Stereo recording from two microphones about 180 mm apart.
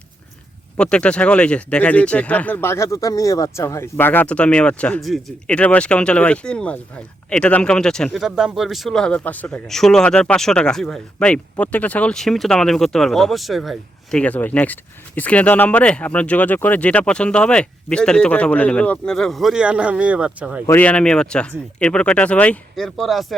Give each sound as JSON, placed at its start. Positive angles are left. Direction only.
{"t": 0.8, "sound": "speech", "side_deg": 5}
{"t": 20.7, "sound": "speech", "side_deg": 10}